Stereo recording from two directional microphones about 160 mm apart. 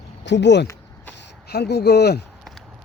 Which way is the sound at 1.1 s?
90° left.